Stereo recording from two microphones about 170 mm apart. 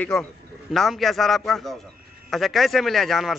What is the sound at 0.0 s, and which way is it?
Speech, 5° left (ahead or behind).